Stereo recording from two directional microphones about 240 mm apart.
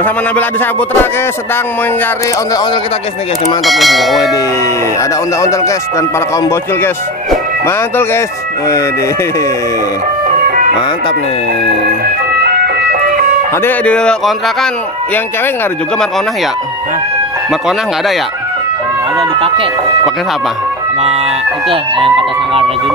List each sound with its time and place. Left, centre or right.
0.0 s speech: centre
3.6 s speech: centre
5.4 s speech: centre
13.6 s speech: centre
17.5 s speech: centre
19.1 s speech: right
21.6 s speech: right